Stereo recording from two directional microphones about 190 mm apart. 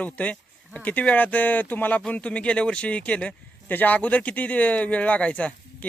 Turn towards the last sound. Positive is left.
turn(degrees=5)  # may be behind; listen again after turning